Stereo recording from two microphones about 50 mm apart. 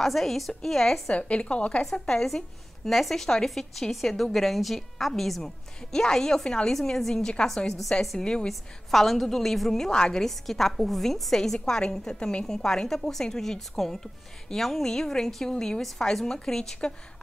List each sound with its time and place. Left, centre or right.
0.0 s a woman's voice: centre
1.1 s speech: left
1.8 s a woman's voice: centre
8.2 s a woman's voice: centre
8.5 s a woman's voice: centre